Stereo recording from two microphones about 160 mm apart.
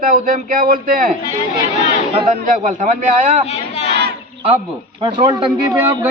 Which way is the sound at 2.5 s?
55° right (ahead or behind).